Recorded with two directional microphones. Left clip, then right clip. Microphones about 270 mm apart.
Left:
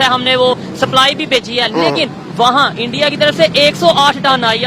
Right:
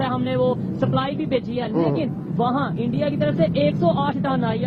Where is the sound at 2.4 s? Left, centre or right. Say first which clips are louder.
Left 13 dB; left.